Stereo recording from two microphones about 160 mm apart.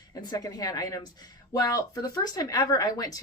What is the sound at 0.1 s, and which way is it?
Speech, 25° left (ahead or behind).